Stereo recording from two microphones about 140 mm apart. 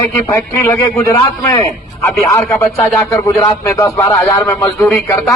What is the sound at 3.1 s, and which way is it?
A man's voice, 20° left (ahead or behind).